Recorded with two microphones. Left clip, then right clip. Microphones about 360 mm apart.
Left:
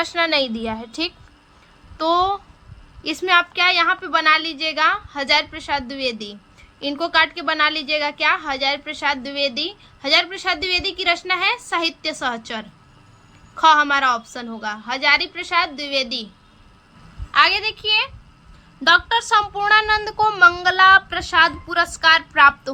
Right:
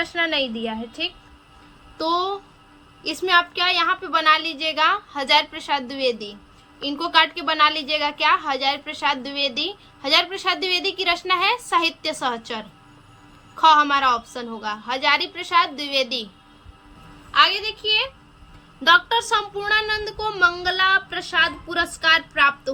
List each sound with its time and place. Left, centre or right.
0.1 s speech: centre
2.0 s a woman's voice: centre
17.3 s a woman's voice: centre